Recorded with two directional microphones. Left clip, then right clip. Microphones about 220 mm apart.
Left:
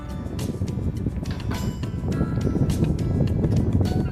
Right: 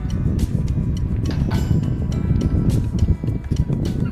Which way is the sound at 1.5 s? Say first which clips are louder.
Right 5 dB; centre (ahead or behind).